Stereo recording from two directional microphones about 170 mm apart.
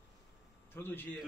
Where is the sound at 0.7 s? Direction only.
10° left (ahead or behind).